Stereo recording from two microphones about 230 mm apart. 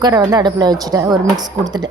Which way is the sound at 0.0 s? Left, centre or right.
Centre.